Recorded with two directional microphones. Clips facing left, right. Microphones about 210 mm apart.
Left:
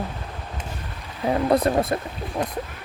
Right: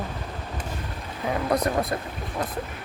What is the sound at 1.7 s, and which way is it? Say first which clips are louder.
Speech: left 4 dB; 25° left (ahead or behind).